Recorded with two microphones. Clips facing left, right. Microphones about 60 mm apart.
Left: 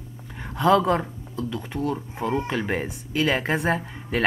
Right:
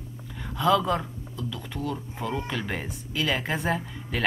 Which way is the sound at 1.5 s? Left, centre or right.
Left.